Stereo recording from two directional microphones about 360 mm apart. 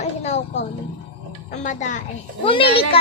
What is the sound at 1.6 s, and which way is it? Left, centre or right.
A woman's voice, left.